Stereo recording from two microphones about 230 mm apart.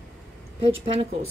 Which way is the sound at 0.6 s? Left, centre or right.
Right.